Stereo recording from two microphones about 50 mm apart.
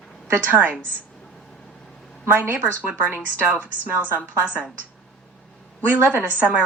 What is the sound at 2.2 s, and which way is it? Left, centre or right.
Speech, right.